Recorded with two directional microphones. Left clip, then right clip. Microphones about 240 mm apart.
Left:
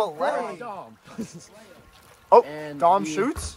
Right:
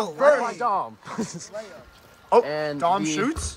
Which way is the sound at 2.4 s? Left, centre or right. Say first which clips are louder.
Right 8 dB; right.